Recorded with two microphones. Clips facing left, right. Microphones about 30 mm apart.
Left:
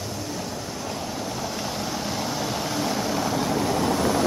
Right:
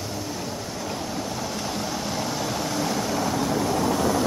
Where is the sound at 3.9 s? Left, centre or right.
Left.